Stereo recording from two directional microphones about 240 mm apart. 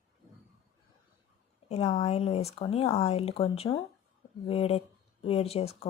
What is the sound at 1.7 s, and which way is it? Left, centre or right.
Speech, left.